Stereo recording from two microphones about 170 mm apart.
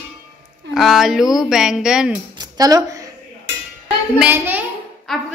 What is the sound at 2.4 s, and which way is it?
Tambourine, 20° right (ahead or behind).